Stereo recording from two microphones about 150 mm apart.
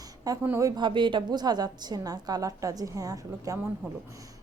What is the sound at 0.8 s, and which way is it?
A woman's voice, 30° right (ahead or behind).